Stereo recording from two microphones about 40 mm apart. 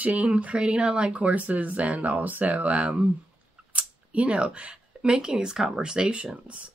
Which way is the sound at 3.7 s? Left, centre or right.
Right.